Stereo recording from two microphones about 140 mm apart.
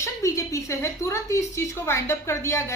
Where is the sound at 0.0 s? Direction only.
20° left (ahead or behind).